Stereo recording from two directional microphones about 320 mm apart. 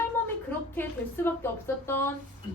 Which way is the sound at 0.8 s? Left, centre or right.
Centre.